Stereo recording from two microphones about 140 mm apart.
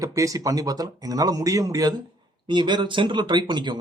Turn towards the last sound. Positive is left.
turn(degrees=-35)  # may be behind; listen again after turning